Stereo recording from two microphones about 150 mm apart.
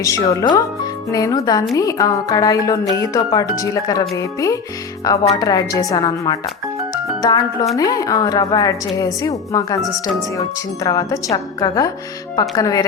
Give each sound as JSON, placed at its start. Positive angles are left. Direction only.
{"t": 0.0, "sound": "speech", "side_deg": 20}
{"t": 9.8, "sound": "speech", "side_deg": 0}
{"t": 10.8, "sound": "speech", "side_deg": 25}